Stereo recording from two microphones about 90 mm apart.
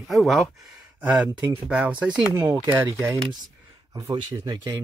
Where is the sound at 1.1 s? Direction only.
15° right (ahead or behind).